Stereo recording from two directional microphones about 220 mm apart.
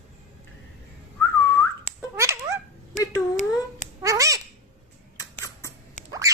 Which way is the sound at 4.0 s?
15° right (ahead or behind).